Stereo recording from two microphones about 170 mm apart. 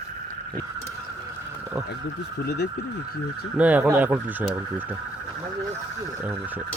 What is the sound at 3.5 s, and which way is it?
Speech, 10° right (ahead or behind).